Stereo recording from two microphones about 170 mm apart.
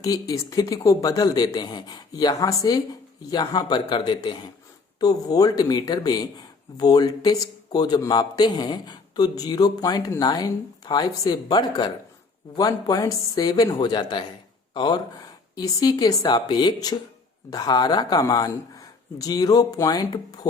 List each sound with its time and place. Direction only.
0.0 s a man's voice: 20° left (ahead or behind)